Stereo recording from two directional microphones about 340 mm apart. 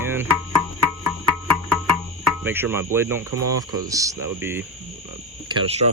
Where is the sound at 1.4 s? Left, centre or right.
Centre.